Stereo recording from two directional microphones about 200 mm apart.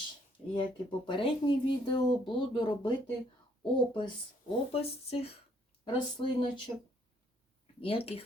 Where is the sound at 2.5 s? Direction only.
25° left (ahead or behind).